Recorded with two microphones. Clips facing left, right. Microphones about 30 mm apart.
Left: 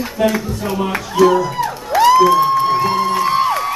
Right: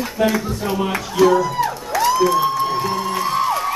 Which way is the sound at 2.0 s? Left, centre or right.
Left.